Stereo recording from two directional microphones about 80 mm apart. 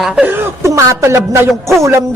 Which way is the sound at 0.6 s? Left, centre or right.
Right.